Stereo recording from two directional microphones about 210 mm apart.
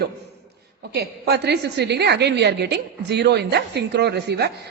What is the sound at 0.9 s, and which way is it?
A woman's voice, 50° right (ahead or behind).